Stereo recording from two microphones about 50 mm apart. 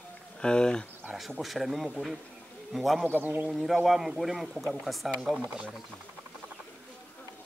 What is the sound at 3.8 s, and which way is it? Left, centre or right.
Speech, centre.